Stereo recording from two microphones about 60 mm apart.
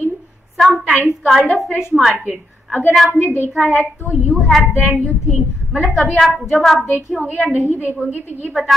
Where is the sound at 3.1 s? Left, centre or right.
Left.